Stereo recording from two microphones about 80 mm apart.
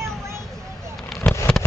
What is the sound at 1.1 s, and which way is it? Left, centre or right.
Fireworks, centre.